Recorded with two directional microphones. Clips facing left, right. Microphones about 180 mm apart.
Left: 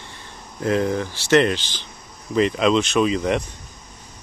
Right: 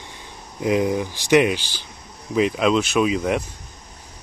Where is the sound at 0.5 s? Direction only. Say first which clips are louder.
Right 1 dB; 10° right (ahead or behind).